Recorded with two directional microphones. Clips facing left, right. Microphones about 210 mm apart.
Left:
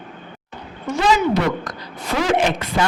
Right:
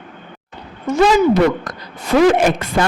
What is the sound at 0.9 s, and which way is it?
Speech, 45° right (ahead or behind).